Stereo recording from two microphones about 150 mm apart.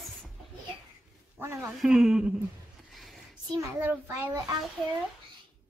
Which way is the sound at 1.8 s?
5° right (ahead or behind).